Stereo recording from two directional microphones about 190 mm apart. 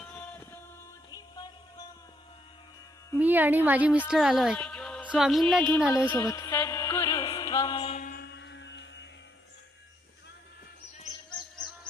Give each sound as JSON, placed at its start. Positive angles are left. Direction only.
{"t": 0.2, "sound": "a sound", "side_deg": 10}
{"t": 1.1, "sound": "music", "side_deg": 20}
{"t": 3.2, "sound": "a woman's voice", "side_deg": -10}
{"t": 5.9, "sound": "music", "side_deg": 15}
{"t": 7.9, "sound": "music", "side_deg": 45}